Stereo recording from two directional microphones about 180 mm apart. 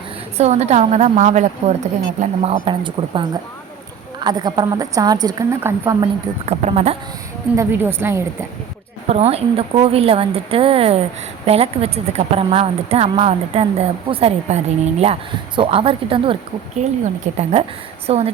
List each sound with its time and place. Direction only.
0.3 s a woman's voice: 40° right (ahead or behind); by 6.1 s 20° right (ahead or behind)
6.4 s a woman's voice: 35° right (ahead or behind)
7.5 s a woman's voice: 15° right (ahead or behind)
9.0 s a woman's voice: 35° right (ahead or behind)